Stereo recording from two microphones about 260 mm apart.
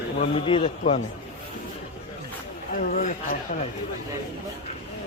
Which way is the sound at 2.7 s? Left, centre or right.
Left.